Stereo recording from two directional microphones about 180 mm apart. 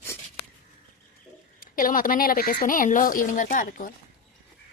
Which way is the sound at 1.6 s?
50° left (ahead or behind).